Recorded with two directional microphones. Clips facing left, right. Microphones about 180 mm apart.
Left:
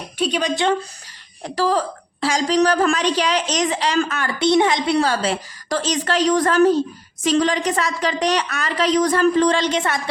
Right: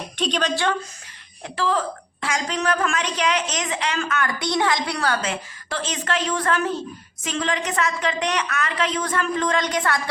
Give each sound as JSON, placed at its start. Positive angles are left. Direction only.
{"t": 0.2, "sound": "speech", "side_deg": 10}
{"t": 1.5, "sound": "a man's voice", "side_deg": 40}